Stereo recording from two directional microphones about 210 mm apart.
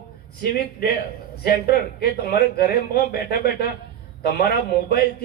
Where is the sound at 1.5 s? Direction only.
45° left (ahead or behind).